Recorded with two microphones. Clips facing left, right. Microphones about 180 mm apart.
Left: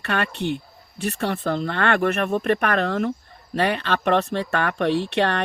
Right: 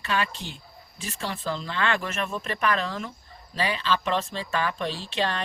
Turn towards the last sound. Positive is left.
turn(degrees=65)  # may be behind; listen again after turning